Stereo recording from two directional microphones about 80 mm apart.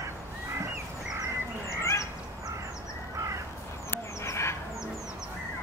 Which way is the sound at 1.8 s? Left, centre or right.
Left.